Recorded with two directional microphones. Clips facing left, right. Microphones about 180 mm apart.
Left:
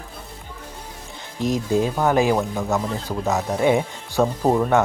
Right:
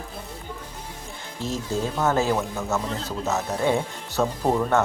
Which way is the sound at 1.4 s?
15° left (ahead or behind).